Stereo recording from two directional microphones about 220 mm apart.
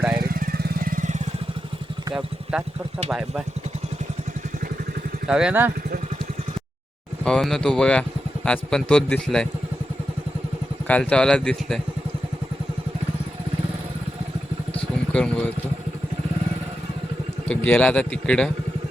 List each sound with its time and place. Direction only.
0.3 s vehicle: 40° right (ahead or behind)
2.1 s speech: 5° right (ahead or behind)
5.3 s speech: 5° right (ahead or behind)
7.3 s speech: centre (ahead or behind)
10.8 s speech: 5° left (ahead or behind)
14.7 s vehicle: 5° left (ahead or behind)
17.5 s speech: 5° left (ahead or behind)